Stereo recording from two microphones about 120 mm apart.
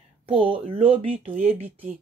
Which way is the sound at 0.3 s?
50° right (ahead or behind).